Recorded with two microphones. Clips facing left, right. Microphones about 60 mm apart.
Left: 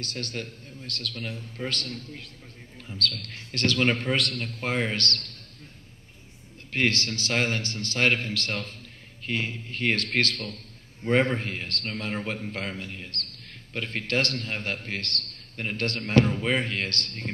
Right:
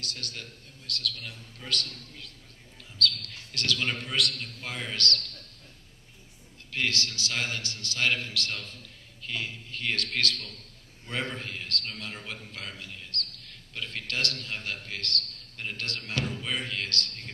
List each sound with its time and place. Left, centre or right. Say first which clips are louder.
0.0 s a man's voice: left 6 dB; left
6.7 s a man's voice: left 5 dB; left